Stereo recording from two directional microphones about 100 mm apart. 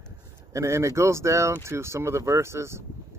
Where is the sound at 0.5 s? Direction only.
30° right (ahead or behind).